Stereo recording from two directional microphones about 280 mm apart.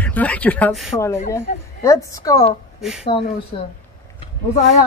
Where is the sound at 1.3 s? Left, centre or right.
Centre.